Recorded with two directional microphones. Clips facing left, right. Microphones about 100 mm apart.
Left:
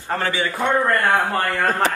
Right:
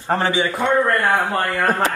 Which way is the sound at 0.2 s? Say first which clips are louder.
Right 3 dB; 20° right (ahead or behind).